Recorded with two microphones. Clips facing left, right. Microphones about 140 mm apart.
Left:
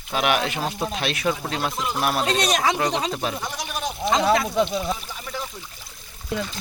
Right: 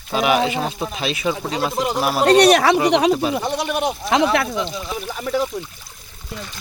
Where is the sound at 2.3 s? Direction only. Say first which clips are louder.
Right 10 dB; 65° right (ahead or behind).